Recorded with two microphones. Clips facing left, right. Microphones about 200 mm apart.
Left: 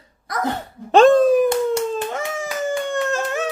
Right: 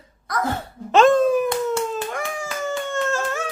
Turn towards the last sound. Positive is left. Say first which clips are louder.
# left 2 dB
turn(degrees=15)  # may be behind; listen again after turning